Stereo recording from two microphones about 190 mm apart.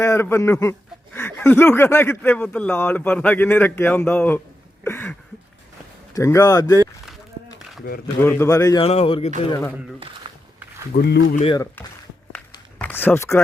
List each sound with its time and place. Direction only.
0.0 s speech: 15° left (ahead or behind)
4.8 s a sound: 10° left (ahead or behind)
6.1 s speech: 15° left (ahead or behind)
8.0 s speech: 10° left (ahead or behind)
8.8 s speech: 30° left (ahead or behind)
10.3 s walk: 25° right (ahead or behind)
10.9 s speech: 55° left (ahead or behind)
11.8 s speech: 10° left (ahead or behind)